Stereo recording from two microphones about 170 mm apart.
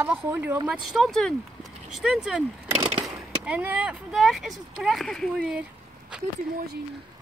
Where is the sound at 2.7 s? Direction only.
20° right (ahead or behind).